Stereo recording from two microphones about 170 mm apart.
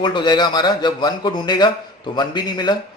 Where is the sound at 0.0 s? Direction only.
25° left (ahead or behind).